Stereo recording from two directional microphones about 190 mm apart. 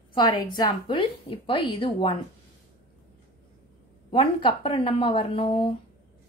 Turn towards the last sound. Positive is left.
turn(degrees=30)  # may be behind; listen again after turning